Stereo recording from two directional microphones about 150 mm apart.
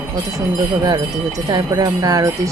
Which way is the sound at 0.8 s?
25° right (ahead or behind).